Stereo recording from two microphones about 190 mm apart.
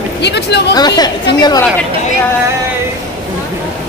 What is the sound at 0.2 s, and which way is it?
Speech, 65° left (ahead or behind).